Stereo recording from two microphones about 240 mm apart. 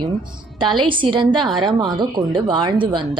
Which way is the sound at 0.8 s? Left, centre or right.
Right.